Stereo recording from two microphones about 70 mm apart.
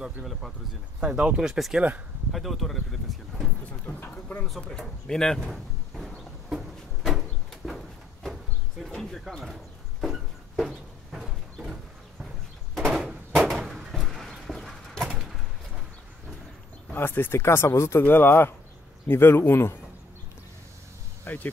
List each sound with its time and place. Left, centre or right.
0.0 s speech: centre
1.0 s speech: centre
3.8 s a sound: left
4.6 s a sound: centre
15.0 s bird: centre
16.9 s speech: left
18.0 s speech: left
21.2 s insect: left